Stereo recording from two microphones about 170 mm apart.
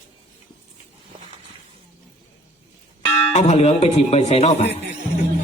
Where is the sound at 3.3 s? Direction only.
40° left (ahead or behind).